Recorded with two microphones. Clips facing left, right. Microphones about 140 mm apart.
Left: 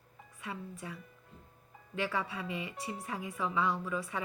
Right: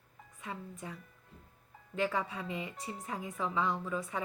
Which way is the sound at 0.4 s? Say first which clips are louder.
Left 1 dB; 25° right (ahead or behind).